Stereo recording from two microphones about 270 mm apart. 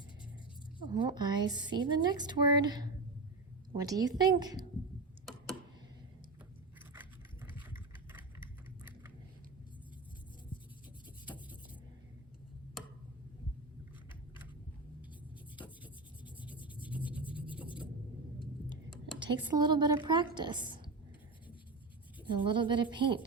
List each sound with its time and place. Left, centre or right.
0.8 s a woman's voice: centre
15.8 s rub: centre
19.5 s a woman's voice: centre
22.3 s a woman's voice: centre